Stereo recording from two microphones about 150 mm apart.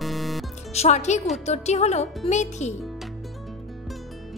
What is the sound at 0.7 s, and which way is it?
A woman's voice, 50° left (ahead or behind).